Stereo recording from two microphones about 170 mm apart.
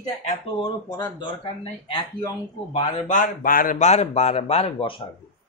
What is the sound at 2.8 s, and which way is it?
A man's voice, 50° left (ahead or behind).